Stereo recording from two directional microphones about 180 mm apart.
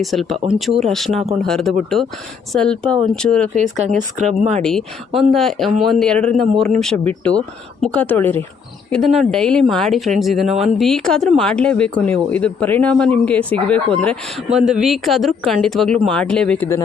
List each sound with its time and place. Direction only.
0.0 s speech: centre (ahead or behind)
3.9 s speech: 40° right (ahead or behind)
4.6 s speech: centre (ahead or behind)